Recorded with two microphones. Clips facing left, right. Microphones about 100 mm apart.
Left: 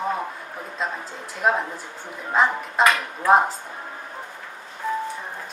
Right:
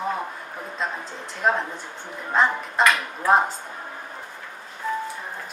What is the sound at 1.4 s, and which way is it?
Speech, 5° left (ahead or behind).